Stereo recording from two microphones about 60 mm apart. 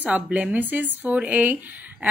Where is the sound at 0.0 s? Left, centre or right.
Right.